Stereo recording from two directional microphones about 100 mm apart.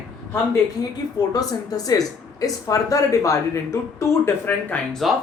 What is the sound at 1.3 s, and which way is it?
Speech, 40° left (ahead or behind).